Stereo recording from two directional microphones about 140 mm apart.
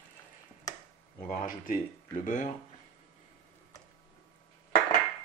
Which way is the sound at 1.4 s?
90° left.